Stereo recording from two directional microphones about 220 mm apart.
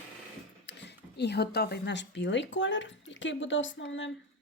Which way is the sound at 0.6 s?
50° left (ahead or behind).